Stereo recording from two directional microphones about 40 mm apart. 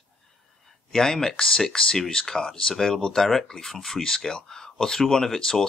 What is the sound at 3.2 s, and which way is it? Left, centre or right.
Speech, centre.